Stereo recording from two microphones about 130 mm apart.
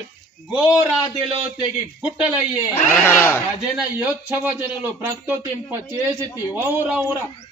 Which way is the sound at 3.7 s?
15° right (ahead or behind).